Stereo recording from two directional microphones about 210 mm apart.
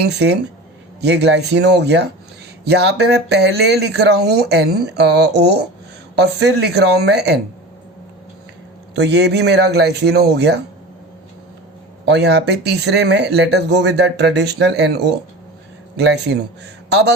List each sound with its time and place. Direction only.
0.0 s speech: 55° right (ahead or behind)
9.0 s speech: 55° right (ahead or behind)
12.0 s speech: 55° right (ahead or behind)